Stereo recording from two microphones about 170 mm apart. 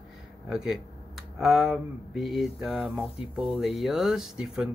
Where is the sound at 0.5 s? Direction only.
5° right (ahead or behind).